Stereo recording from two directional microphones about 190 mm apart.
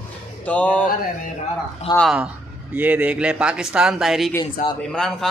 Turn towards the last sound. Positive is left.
turn(degrees=5)  # may be behind; listen again after turning